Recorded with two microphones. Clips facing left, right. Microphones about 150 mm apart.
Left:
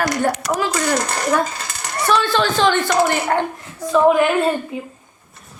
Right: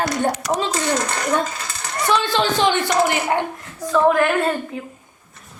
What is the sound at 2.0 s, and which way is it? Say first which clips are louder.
A woman's voice: left 2 dB; 20° right (ahead or behind).